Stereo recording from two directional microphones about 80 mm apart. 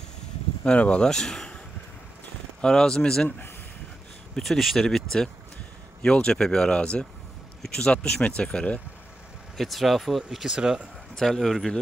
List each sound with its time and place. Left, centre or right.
0.7 s speech: centre
2.6 s speech: centre
3.3 s speech: left
4.4 s speech: centre
9.6 s speech: centre
11.1 s speech: centre